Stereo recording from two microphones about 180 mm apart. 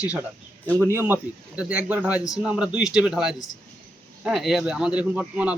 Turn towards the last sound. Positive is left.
turn(degrees=-10)  # may be behind; listen again after turning